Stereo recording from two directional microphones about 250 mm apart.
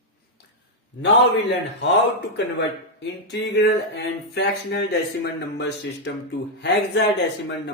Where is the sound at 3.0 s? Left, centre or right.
Left.